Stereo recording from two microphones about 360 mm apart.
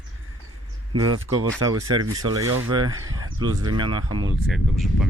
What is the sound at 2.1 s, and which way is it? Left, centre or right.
Speech, centre.